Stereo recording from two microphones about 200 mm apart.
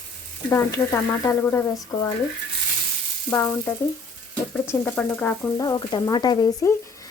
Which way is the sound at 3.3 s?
15° left (ahead or behind).